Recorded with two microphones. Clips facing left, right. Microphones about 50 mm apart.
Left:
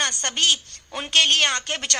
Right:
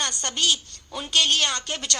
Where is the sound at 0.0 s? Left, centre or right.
Left.